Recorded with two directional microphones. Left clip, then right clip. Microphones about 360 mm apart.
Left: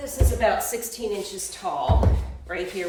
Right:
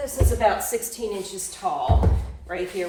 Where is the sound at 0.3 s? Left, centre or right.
Centre.